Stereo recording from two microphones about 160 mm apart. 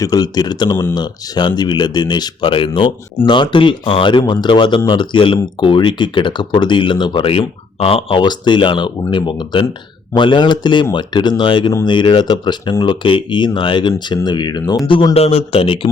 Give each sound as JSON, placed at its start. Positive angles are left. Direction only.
{"t": 0.0, "sound": "speech", "side_deg": 25}